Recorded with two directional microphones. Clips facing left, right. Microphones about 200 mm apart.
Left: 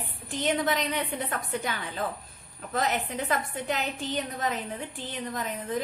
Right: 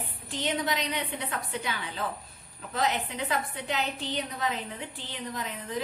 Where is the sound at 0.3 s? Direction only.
50° left (ahead or behind).